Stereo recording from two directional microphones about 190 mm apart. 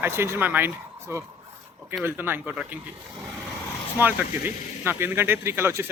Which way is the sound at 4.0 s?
10° right (ahead or behind).